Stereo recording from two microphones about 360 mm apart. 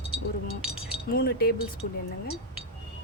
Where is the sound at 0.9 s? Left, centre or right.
Left.